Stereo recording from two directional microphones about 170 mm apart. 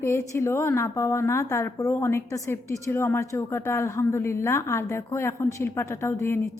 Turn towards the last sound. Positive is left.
turn(degrees=15)  # may be behind; listen again after turning